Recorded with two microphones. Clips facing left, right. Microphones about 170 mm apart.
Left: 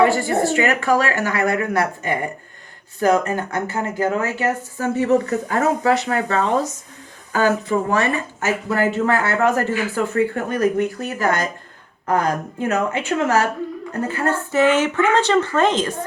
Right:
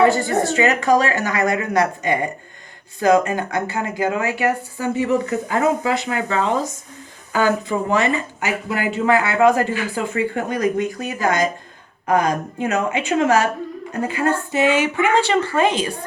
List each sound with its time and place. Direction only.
0.1 s speech: 20° right (ahead or behind)
7.4 s speech: 15° right (ahead or behind)